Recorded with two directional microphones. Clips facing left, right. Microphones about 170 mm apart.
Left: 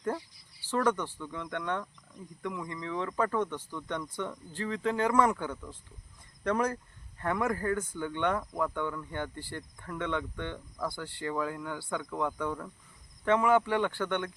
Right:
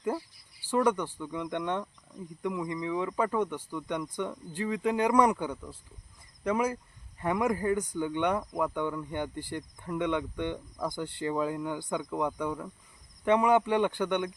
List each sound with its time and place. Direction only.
0.6 s speech: 15° right (ahead or behind)